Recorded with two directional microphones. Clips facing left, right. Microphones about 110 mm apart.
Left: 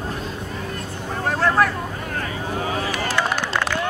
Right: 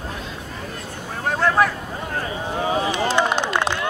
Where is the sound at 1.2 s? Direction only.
Centre (ahead or behind).